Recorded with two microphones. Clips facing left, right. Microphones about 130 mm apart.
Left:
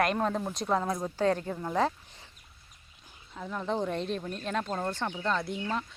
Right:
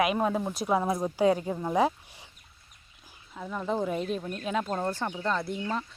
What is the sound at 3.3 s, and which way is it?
Speech, centre (ahead or behind).